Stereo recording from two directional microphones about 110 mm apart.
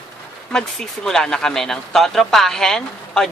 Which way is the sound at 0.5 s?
5° left (ahead or behind).